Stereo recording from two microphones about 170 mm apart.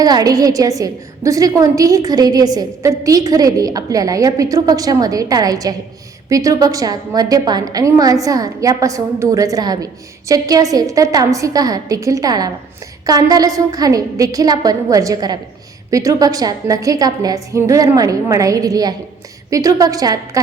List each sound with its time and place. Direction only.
0.0 s a woman's voice: 20° right (ahead or behind)